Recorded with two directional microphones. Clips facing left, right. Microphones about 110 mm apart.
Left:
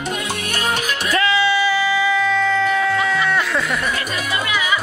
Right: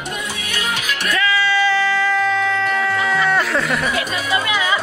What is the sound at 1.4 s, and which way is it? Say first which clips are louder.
Music: even; 15° left (ahead or behind).